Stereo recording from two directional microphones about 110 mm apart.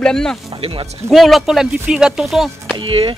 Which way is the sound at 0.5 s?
55° right (ahead or behind).